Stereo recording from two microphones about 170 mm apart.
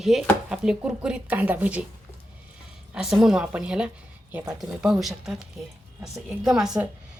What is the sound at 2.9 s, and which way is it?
Speech, centre (ahead or behind).